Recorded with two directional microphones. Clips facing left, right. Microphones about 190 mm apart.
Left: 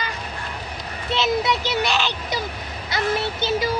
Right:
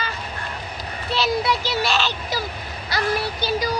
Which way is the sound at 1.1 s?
20° left (ahead or behind).